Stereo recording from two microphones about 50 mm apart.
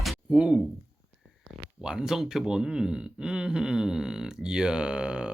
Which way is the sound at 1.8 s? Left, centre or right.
Centre.